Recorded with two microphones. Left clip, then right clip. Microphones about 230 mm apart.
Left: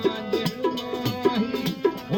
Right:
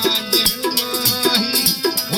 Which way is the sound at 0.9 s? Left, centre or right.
Right.